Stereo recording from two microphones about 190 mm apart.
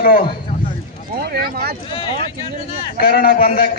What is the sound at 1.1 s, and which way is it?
Speech, 55° right (ahead or behind).